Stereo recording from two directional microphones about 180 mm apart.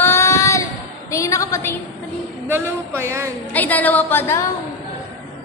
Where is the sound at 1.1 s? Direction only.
15° left (ahead or behind).